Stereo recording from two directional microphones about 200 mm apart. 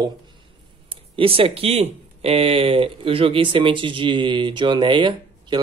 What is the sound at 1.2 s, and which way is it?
Speech, 25° right (ahead or behind).